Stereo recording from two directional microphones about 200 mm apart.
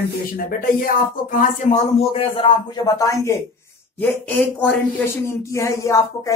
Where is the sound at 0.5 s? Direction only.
45° left (ahead or behind).